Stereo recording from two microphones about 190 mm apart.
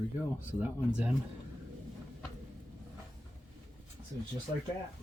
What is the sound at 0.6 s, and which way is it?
Speech, 5° right (ahead or behind).